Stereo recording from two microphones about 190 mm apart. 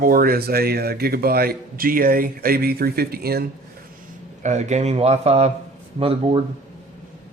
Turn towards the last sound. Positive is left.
turn(degrees=-30)  # may be behind; listen again after turning